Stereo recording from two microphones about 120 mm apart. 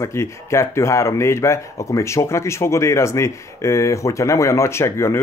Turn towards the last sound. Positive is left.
turn(degrees=20)  # may be behind; listen again after turning